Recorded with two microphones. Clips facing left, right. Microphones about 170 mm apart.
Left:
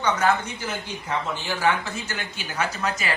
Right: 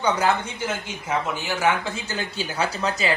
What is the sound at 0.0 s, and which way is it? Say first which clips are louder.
A woman's voice: right 1 dB; 30° right (ahead or behind).